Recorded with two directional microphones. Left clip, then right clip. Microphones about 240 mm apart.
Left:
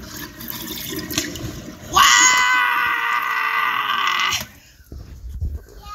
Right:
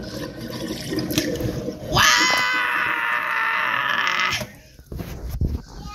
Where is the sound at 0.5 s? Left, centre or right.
Left.